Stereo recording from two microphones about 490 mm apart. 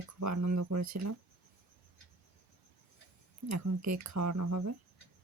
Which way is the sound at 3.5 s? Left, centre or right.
Right.